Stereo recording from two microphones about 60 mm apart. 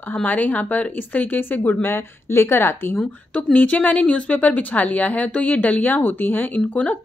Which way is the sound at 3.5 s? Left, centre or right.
Left.